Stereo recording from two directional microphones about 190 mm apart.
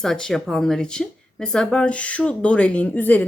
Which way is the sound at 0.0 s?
5° left (ahead or behind).